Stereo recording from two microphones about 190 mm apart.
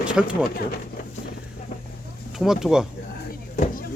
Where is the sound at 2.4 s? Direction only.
Centre (ahead or behind).